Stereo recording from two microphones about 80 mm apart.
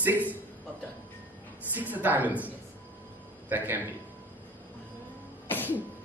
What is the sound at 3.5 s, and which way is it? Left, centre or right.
Speech, right.